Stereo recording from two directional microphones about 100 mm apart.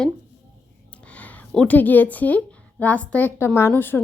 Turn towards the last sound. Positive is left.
turn(degrees=20)  # may be behind; listen again after turning